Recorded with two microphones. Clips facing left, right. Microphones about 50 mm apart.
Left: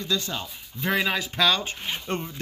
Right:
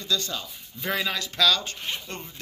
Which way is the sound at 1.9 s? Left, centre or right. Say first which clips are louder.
Left 7 dB; left.